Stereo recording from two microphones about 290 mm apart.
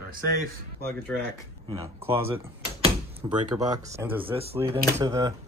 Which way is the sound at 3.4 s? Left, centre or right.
Centre.